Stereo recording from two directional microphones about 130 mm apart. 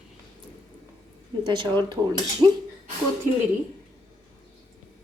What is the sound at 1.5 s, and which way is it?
A woman's voice, 35° right (ahead or behind).